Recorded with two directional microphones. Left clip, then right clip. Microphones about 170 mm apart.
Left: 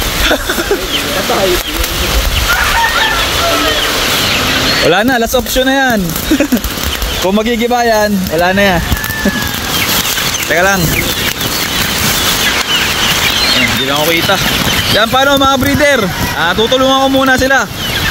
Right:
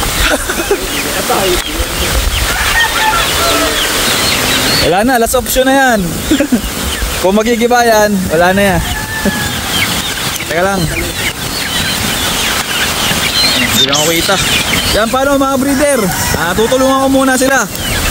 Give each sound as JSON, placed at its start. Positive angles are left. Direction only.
{"t": 5.0, "sound": "speech", "side_deg": -25}
{"t": 7.2, "sound": "speech", "side_deg": -25}
{"t": 10.5, "sound": "speech", "side_deg": -5}
{"t": 13.8, "sound": "speech", "side_deg": -10}